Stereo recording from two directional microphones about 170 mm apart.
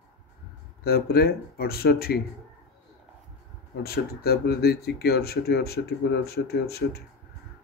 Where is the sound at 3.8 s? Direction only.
65° left (ahead or behind).